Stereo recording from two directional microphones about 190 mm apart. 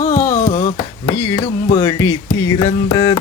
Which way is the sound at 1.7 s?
20° left (ahead or behind).